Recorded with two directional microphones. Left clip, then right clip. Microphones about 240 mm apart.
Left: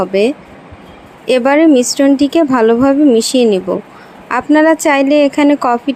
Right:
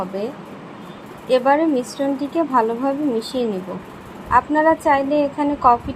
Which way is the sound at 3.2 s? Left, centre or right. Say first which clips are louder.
Left 11 dB; left.